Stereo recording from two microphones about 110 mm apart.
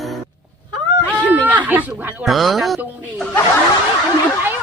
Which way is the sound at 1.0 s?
15° left (ahead or behind).